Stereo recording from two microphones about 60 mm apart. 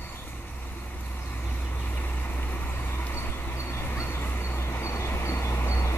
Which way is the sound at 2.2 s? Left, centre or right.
Left.